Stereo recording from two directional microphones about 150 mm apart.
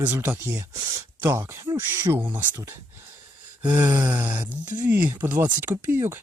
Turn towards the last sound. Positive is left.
turn(degrees=-15)  # may be behind; listen again after turning